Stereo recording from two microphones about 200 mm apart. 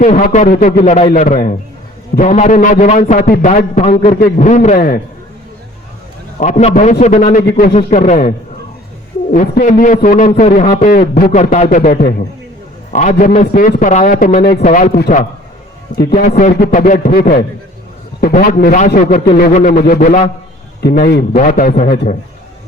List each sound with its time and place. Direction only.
0.0 s a man's voice: 40° left (ahead or behind)
6.4 s a man's voice: 35° left (ahead or behind)
9.3 s a man's voice: 40° left (ahead or behind)
20.8 s a man's voice: 50° left (ahead or behind)